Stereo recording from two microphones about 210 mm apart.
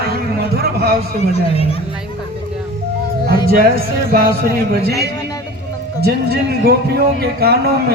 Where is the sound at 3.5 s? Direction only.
45° right (ahead or behind).